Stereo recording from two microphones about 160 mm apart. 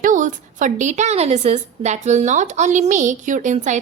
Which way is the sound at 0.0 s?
55° right (ahead or behind).